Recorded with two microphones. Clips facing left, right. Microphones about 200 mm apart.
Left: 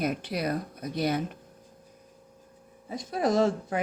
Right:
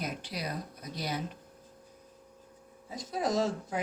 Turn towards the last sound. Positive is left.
turn(degrees=55)  # may be behind; listen again after turning